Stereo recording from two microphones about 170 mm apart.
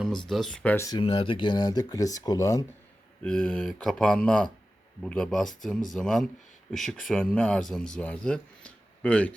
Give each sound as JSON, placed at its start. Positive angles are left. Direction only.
{"t": 0.3, "sound": "speech", "side_deg": 0}
{"t": 0.9, "sound": "speech", "side_deg": 30}
{"t": 3.2, "sound": "speech", "side_deg": 5}